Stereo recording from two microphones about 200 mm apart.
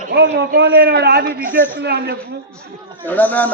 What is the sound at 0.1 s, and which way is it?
A man's voice, 60° right (ahead or behind).